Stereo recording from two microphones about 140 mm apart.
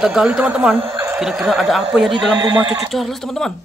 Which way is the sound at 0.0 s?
5° right (ahead or behind).